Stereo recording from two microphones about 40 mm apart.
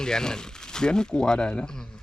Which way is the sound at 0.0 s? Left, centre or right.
Centre.